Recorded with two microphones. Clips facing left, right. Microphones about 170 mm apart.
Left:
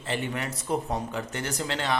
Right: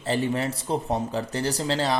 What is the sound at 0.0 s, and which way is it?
A man's voice, 35° right (ahead or behind).